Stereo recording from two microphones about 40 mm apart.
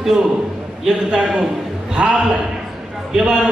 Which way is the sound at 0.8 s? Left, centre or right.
Centre.